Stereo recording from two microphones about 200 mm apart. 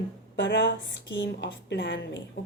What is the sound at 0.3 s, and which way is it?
A woman's voice, 60° left (ahead or behind).